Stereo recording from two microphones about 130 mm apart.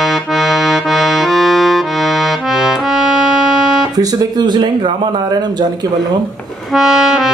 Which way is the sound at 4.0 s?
35° right (ahead or behind).